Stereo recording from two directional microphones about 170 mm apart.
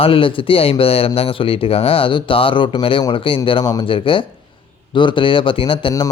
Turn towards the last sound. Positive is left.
turn(degrees=25)  # may be behind; listen again after turning